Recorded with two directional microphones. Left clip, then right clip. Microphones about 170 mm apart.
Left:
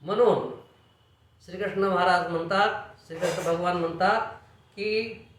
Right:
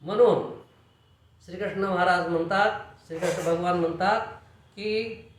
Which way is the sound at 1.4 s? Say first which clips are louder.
Left 2 dB; 10° left (ahead or behind).